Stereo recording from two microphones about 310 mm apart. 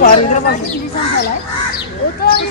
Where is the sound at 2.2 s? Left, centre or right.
Left.